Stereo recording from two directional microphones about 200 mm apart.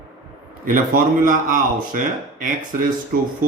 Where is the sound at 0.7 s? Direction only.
45° right (ahead or behind).